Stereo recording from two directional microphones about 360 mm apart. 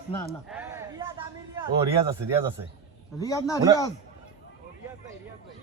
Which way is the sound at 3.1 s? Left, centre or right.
Centre.